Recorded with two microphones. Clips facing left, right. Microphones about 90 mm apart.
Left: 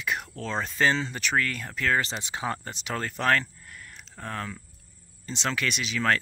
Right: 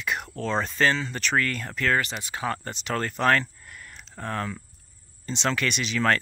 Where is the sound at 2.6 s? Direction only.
5° left (ahead or behind).